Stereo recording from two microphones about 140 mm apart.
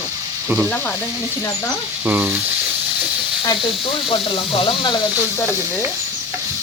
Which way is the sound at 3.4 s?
35° left (ahead or behind).